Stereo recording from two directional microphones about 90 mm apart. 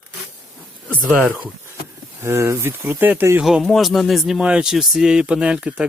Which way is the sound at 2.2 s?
30° right (ahead or behind).